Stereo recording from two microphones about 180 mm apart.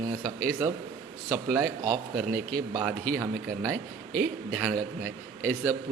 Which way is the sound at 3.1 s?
15° right (ahead or behind).